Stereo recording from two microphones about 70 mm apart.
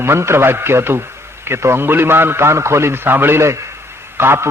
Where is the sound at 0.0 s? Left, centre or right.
Right.